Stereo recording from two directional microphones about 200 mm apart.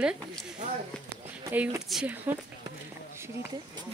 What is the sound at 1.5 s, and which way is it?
Speech, 5° right (ahead or behind).